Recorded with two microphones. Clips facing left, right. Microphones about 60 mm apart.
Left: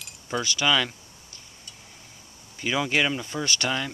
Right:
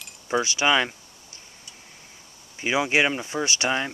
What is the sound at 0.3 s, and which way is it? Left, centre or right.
Speech, right.